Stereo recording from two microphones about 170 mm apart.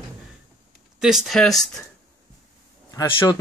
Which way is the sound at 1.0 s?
5° right (ahead or behind).